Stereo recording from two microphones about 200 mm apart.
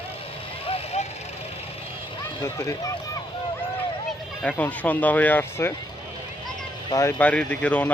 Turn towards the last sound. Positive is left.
turn(degrees=5)  # may be behind; listen again after turning